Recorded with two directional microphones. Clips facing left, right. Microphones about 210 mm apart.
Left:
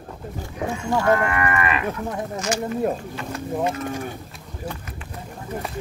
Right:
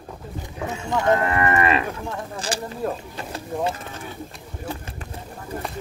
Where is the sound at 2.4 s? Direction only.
30° right (ahead or behind).